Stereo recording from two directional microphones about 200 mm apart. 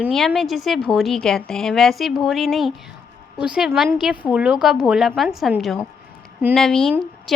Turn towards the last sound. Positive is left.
turn(degrees=0)  # may be behind; listen again after turning